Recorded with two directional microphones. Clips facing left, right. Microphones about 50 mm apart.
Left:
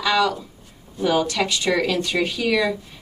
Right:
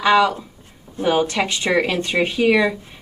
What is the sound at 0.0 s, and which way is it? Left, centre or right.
Speech, right.